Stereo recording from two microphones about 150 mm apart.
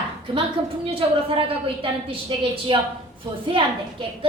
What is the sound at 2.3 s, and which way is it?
A woman's voice, 35° right (ahead or behind).